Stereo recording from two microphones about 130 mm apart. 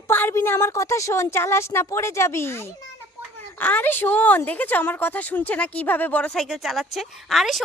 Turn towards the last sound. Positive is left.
turn(degrees=0)  # may be behind; listen again after turning